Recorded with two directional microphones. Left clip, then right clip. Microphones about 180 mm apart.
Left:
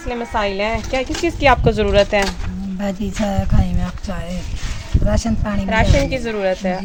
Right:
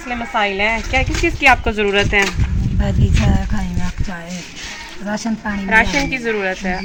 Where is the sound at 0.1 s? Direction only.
65° left (ahead or behind); by 2.2 s 85° left.